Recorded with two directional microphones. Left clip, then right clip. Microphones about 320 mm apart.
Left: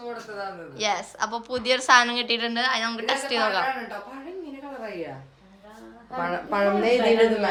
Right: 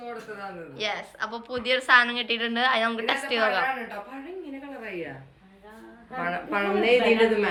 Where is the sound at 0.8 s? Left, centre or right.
Centre.